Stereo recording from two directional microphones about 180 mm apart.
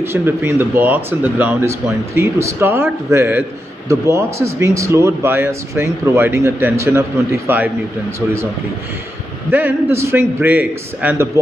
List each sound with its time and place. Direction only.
0.0 s speech: 10° right (ahead or behind)
9.5 s speech: 10° right (ahead or behind)